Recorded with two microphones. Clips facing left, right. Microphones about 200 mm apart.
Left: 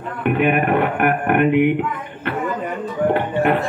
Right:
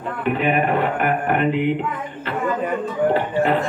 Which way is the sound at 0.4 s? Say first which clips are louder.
Left 3 dB; 60° left (ahead or behind).